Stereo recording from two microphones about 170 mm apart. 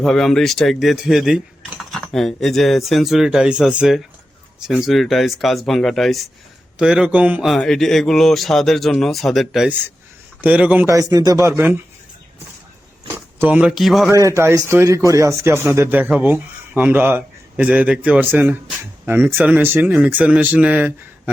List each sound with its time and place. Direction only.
0.0 s a man's voice: centre (ahead or behind)
10.8 s speech: 20° right (ahead or behind)
13.4 s a man's voice: 10° right (ahead or behind)
14.1 s speech: 15° right (ahead or behind)